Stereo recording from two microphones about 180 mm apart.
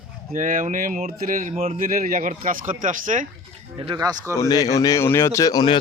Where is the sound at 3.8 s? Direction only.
20° right (ahead or behind).